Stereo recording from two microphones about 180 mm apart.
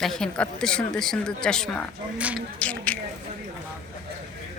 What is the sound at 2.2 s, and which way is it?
Speech, 10° right (ahead or behind).